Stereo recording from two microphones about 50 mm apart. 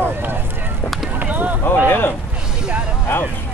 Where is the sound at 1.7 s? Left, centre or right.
Left.